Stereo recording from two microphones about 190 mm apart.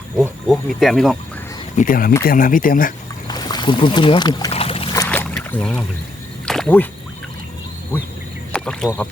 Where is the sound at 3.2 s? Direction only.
20° left (ahead or behind).